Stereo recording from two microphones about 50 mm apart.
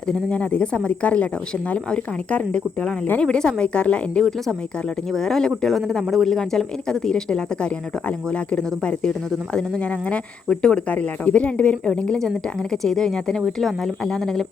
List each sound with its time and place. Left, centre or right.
0.1 s speech: left
4.2 s speech: centre
12.7 s speech: centre